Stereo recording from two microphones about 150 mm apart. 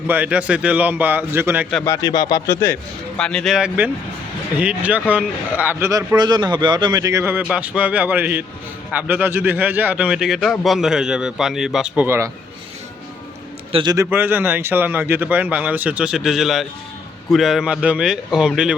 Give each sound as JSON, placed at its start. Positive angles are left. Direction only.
{"t": 0.1, "sound": "speech", "side_deg": -10}
{"t": 1.8, "sound": "speech", "side_deg": 25}
{"t": 3.2, "sound": "a man's voice", "side_deg": 5}
{"t": 12.0, "sound": "speech", "side_deg": -15}
{"t": 13.9, "sound": "a man's voice", "side_deg": -15}